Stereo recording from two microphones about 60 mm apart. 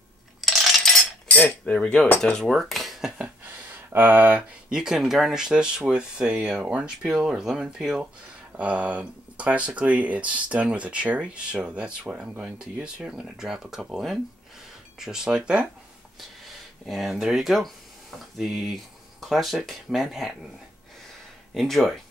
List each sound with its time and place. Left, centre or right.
0.4 s coin: centre
1.7 s cutlery: centre
2.3 s speech: centre
3.1 s a sound: right
4.6 s speech: centre
8.5 s speech: right
13.9 s speech: centre
15.0 s speech: centre
16.8 s speech: centre
21.5 s speech: centre